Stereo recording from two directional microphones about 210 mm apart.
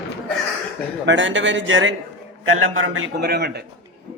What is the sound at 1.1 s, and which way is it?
Speech, 60° right (ahead or behind).